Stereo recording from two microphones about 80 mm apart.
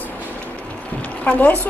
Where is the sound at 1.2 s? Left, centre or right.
Centre.